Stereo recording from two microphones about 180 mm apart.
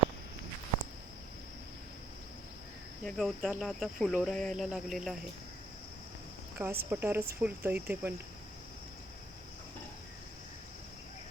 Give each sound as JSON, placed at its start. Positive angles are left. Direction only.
{"t": 3.0, "sound": "speech", "side_deg": 0}
{"t": 6.6, "sound": "speech", "side_deg": -15}